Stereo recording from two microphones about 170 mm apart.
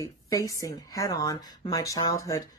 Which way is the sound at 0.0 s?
20° left (ahead or behind).